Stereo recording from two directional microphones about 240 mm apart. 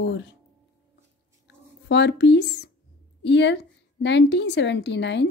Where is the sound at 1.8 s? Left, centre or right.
Left.